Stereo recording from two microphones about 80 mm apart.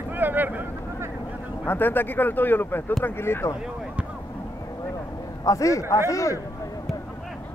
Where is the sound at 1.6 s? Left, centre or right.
Left.